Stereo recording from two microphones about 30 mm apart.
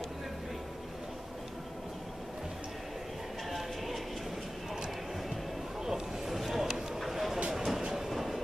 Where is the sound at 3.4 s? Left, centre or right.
Centre.